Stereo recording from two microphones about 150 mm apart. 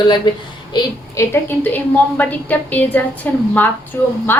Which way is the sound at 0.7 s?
20° left (ahead or behind).